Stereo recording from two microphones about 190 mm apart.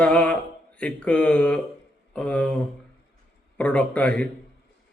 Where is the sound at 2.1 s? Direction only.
5° left (ahead or behind).